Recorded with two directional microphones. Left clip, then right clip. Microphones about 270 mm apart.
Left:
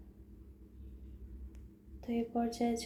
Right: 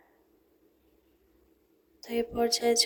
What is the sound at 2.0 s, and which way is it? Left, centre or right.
Speech, right.